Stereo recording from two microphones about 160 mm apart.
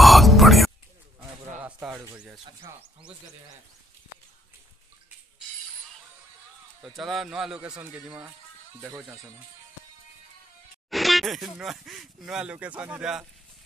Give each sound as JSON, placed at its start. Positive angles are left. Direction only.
{"t": 0.0, "sound": "music", "side_deg": 0}
{"t": 1.6, "sound": "a sound", "side_deg": -10}
{"t": 2.1, "sound": "speech", "side_deg": -5}
{"t": 6.8, "sound": "speech", "side_deg": 0}
{"t": 10.9, "sound": "speech", "side_deg": 0}